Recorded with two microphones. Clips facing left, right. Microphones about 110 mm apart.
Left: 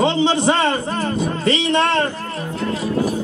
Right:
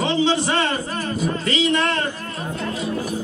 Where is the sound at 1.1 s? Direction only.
30° left (ahead or behind).